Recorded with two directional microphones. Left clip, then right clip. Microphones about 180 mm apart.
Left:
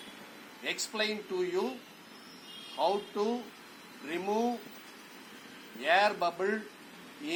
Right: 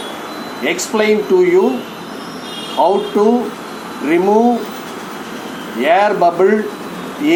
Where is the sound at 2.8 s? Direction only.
20° left (ahead or behind).